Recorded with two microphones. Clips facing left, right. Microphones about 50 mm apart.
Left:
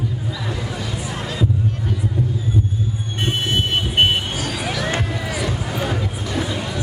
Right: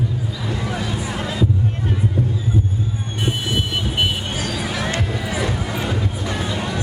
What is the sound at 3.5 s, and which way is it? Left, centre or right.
Vehicle, left.